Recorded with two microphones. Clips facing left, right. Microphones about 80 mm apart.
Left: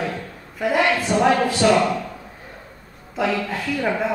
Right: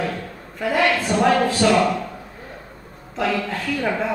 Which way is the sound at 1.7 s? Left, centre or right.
Centre.